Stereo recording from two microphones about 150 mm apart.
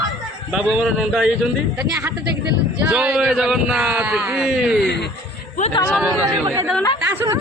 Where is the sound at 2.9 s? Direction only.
5° right (ahead or behind).